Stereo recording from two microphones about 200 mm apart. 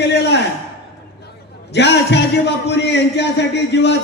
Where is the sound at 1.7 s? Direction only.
60° left (ahead or behind).